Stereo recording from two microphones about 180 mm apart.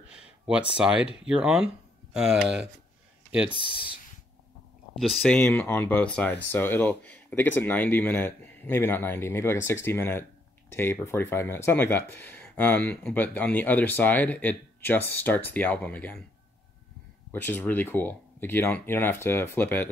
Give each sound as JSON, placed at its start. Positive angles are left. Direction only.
{"t": 1.2, "sound": "speech", "side_deg": -5}
{"t": 3.7, "sound": "speech", "side_deg": 30}
{"t": 4.9, "sound": "speech", "side_deg": 0}
{"t": 17.3, "sound": "speech", "side_deg": 10}